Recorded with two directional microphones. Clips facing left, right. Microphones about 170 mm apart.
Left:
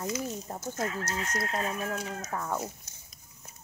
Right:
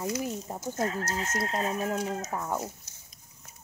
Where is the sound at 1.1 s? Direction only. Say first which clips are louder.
Right 2 dB; 25° right (ahead or behind).